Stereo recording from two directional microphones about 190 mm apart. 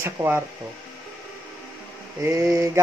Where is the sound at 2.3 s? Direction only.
15° right (ahead or behind).